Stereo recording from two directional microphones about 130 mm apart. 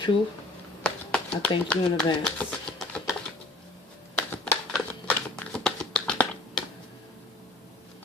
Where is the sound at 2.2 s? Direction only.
5° left (ahead or behind).